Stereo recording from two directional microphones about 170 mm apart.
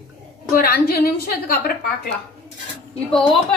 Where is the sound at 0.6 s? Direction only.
60° left (ahead or behind).